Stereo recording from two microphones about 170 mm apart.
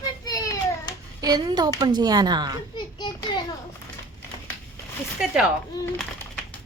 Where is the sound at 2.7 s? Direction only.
25° left (ahead or behind).